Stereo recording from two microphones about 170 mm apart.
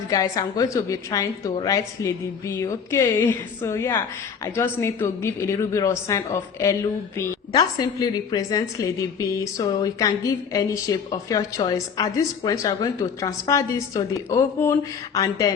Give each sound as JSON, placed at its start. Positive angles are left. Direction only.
{"t": 0.1, "sound": "a woman's voice", "side_deg": 20}